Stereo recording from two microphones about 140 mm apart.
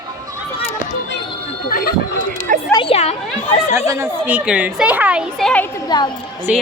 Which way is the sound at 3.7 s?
20° right (ahead or behind).